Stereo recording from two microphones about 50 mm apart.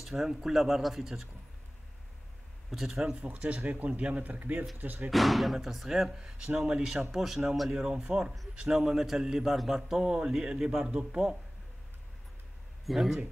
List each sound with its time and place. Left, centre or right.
0.0 s speech: centre
2.7 s speech: centre
3.2 s speech: right
5.1 s speech: centre
6.1 s a man's voice: centre
7.7 s a man's voice: centre
12.8 s speech: centre